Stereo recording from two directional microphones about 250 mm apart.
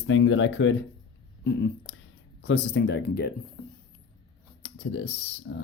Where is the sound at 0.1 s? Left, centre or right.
Left.